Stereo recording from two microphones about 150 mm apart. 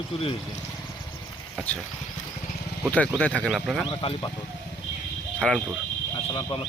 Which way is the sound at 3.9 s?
35° left (ahead or behind).